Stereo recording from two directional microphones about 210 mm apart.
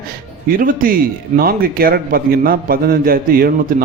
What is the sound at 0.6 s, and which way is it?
A man's voice, 40° right (ahead or behind).